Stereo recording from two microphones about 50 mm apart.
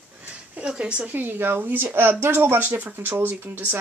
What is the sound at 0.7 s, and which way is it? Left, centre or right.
Speech, right.